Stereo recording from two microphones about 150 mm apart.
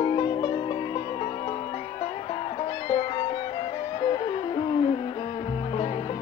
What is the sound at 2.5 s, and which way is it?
Music, 35° left (ahead or behind).